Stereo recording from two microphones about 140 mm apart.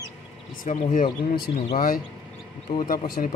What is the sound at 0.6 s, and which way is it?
Speech, 60° left (ahead or behind).